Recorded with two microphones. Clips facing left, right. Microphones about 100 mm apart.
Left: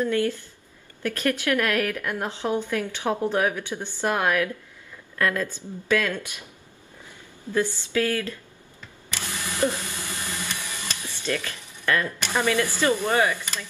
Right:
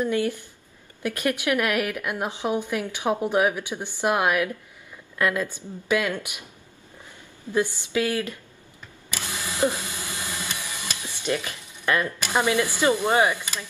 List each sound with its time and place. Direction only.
0.0 s a woman's voice: 15° right (ahead or behind)
7.5 s a woman's voice: 15° right (ahead or behind)
9.1 s printer: 15° right (ahead or behind)
12.2 s a woman's voice: 15° right (ahead or behind)